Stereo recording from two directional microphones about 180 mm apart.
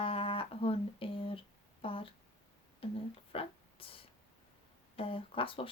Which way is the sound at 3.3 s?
30° left (ahead or behind).